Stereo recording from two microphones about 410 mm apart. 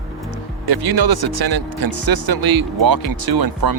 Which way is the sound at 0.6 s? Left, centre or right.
Right.